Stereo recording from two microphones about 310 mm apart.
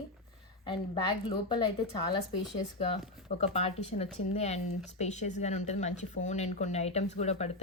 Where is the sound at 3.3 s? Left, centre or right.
Centre.